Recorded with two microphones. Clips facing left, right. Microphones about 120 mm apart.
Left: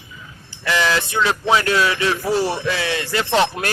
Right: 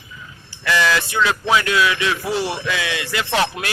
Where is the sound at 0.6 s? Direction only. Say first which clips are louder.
Right 1 dB; 25° left (ahead or behind).